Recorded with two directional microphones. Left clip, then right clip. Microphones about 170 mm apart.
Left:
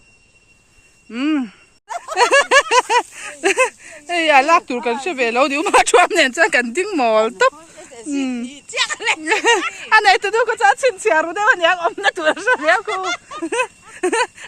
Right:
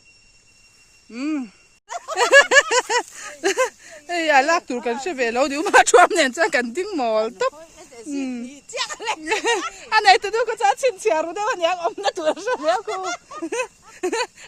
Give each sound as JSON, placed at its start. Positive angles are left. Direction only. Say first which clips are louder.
{"t": 1.1, "sound": "speech", "louder": "left 7 dB", "side_deg": 0}
{"t": 1.9, "sound": "a sound", "louder": "left 3 dB", "side_deg": -65}
{"t": 2.1, "sound": "a sound", "louder": "left 1 dB", "side_deg": -20}
{"t": 8.2, "sound": "speech", "louder": "left 5 dB", "side_deg": -10}
{"t": 8.4, "sound": "speech", "louder": "left 7 dB", "side_deg": -45}
{"t": 9.2, "sound": "speech", "louder": "left 5 dB", "side_deg": -5}
{"t": 12.8, "sound": "speech", "louder": "left 5 dB", "side_deg": -35}
{"t": 13.4, "sound": "speech", "louder": "left 6 dB", "side_deg": -10}